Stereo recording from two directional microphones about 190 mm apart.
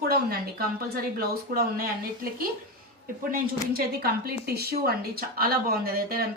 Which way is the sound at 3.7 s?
55° right (ahead or behind).